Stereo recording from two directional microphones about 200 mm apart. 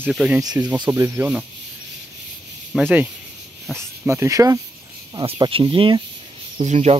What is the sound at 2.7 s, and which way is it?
Speech, 5° right (ahead or behind).